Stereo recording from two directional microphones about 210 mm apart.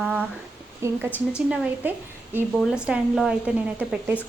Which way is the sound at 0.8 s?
15° right (ahead or behind).